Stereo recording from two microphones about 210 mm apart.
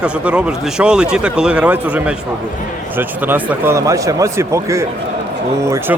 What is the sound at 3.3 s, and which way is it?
Speech, 10° right (ahead or behind).